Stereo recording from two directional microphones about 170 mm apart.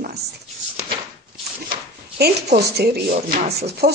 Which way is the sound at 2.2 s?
70° right (ahead or behind).